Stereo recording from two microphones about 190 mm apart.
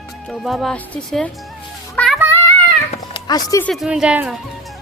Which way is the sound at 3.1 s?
20° left (ahead or behind).